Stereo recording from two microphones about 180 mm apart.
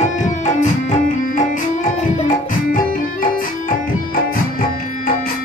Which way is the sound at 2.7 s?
50° left (ahead or behind).